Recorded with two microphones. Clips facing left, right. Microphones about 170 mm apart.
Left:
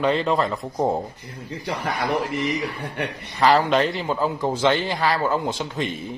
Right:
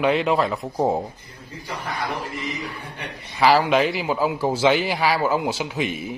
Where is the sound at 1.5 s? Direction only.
70° left (ahead or behind).